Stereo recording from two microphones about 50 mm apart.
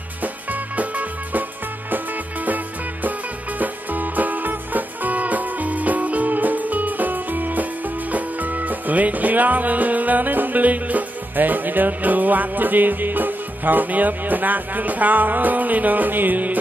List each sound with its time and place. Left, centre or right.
0.2 s music: right
2.4 s music: right